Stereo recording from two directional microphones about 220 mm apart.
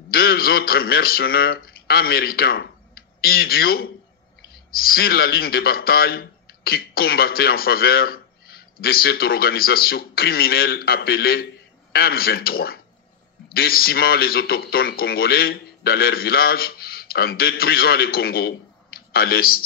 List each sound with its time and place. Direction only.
0.1 s a man's voice: 45° left (ahead or behind)